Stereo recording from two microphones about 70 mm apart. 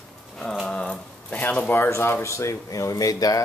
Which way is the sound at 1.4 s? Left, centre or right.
Left.